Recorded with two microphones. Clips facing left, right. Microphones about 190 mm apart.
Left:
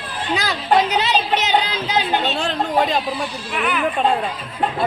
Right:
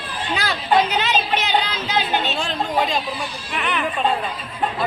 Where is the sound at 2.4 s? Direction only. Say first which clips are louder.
Left 3 dB; 65° left (ahead or behind).